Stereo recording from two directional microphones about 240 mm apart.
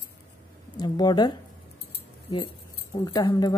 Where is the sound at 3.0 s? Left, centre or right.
Centre.